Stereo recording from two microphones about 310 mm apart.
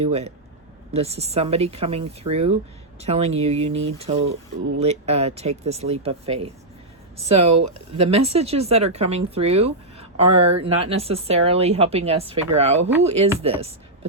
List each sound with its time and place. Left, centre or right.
0.0 s speech: centre
7.5 s speech: right
8.0 s speech: centre